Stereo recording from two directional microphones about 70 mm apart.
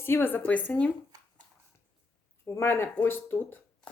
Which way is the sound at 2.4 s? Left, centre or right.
Left.